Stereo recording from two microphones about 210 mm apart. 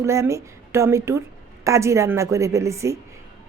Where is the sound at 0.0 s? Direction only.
15° right (ahead or behind).